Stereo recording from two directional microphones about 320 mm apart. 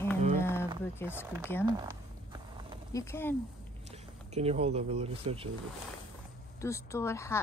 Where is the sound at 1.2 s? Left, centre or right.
Centre.